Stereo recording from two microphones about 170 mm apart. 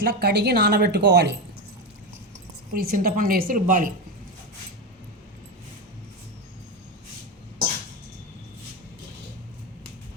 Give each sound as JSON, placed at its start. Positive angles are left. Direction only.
{"t": 0.0, "sound": "a woman's voice", "side_deg": -70}
{"t": 2.7, "sound": "a woman's voice", "side_deg": -60}